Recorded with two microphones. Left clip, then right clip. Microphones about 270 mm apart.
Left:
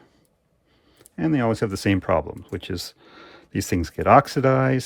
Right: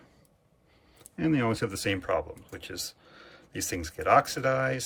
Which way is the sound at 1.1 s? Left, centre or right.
Centre.